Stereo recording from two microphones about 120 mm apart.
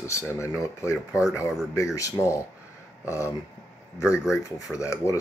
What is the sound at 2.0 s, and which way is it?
Speech, 25° left (ahead or behind).